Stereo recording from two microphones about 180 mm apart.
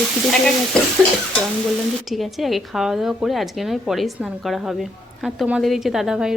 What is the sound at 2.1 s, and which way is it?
A woman's voice, centre (ahead or behind).